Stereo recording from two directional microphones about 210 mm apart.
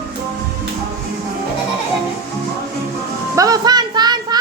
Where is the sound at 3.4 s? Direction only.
20° right (ahead or behind).